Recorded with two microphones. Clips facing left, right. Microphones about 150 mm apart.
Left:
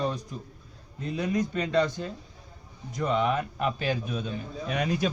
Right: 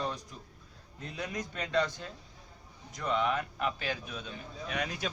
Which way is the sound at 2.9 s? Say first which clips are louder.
Left 5 dB; 15° left (ahead or behind).